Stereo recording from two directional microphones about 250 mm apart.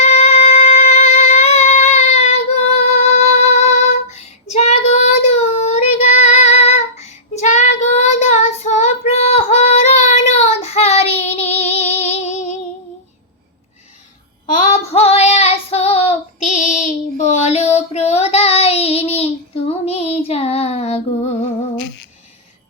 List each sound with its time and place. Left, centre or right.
0.0 s music: left
4.1 s child singing: left
14.5 s child singing: left
21.8 s humming: left